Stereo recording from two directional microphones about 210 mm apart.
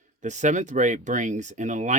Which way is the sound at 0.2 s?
35° right (ahead or behind).